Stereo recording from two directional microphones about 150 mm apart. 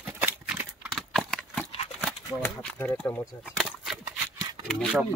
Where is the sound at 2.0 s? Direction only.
10° left (ahead or behind).